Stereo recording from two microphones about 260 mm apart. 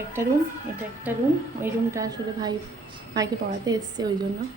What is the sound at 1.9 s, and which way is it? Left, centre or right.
Speech, centre.